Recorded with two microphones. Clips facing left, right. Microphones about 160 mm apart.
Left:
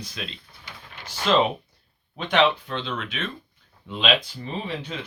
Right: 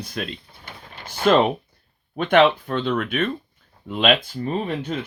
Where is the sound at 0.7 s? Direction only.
50° right (ahead or behind).